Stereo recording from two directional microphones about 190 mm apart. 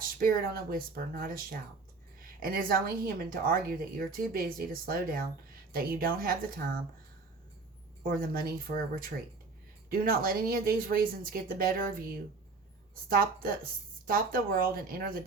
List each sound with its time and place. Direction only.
0.2 s a woman's voice: 50° right (ahead or behind)
8.0 s a woman's voice: 50° right (ahead or behind)
13.1 s a woman's voice: 50° right (ahead or behind)